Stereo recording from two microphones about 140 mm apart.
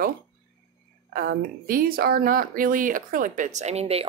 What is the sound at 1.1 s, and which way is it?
Speech, 90° right.